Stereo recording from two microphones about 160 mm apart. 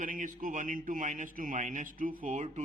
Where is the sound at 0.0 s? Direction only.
55° right (ahead or behind).